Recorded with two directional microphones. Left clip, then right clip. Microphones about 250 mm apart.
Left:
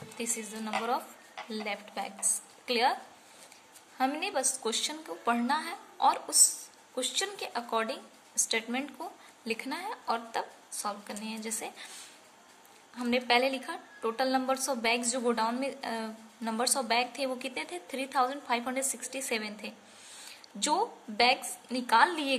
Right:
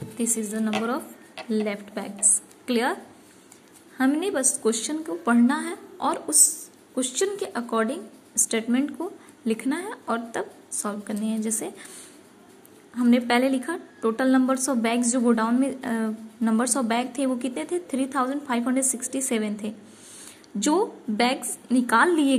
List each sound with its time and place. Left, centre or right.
1.5 s a woman's voice: centre
4.0 s a woman's voice: centre
12.9 s a woman's voice: centre